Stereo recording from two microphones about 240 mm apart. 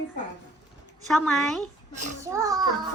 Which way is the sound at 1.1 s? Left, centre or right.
Centre.